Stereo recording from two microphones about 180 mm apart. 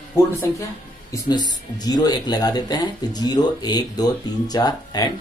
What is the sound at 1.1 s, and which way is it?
Speech, 20° left (ahead or behind).